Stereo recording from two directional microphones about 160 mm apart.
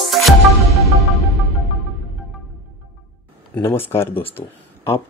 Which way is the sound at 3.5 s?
15° left (ahead or behind).